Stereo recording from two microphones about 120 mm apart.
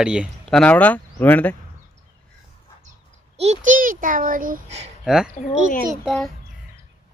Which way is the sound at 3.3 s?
70° right (ahead or behind).